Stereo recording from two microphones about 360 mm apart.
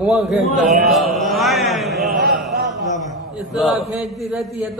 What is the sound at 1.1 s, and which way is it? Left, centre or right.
Speech, centre.